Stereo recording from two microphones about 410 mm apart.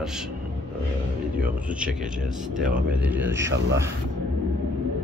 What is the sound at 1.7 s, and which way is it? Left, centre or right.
Speech, centre.